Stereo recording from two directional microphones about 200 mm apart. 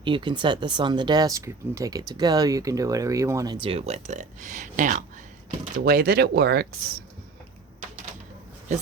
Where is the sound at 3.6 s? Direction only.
30° right (ahead or behind); by 6.9 s 50° right (ahead or behind).